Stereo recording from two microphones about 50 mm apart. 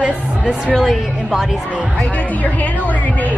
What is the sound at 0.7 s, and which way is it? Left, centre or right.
Speech, centre.